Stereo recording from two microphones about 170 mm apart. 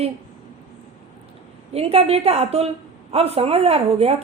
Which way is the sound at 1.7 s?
35° right (ahead or behind).